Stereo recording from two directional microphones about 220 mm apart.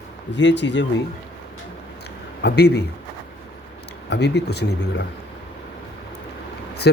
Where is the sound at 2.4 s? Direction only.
50° left (ahead or behind).